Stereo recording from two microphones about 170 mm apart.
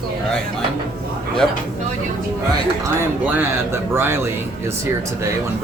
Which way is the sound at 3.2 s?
10° right (ahead or behind).